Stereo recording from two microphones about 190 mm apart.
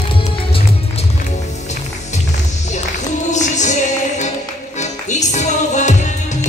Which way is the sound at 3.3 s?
40° left (ahead or behind).